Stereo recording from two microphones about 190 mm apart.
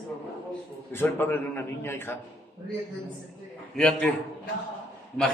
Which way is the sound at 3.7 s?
5° left (ahead or behind).